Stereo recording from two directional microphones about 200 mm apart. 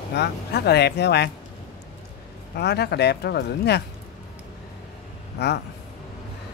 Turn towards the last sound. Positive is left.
turn(degrees=55)  # may be behind; listen again after turning